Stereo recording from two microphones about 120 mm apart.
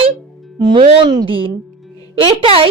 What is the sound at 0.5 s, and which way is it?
A woman's voice, 35° right (ahead or behind).